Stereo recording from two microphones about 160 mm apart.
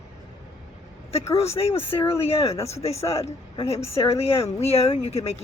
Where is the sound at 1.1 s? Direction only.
40° left (ahead or behind).